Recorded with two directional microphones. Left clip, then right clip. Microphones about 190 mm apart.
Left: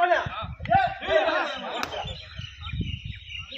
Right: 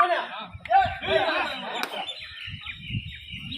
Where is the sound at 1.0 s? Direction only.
10° left (ahead or behind).